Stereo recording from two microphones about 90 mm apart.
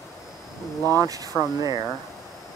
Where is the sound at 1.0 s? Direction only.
40° right (ahead or behind).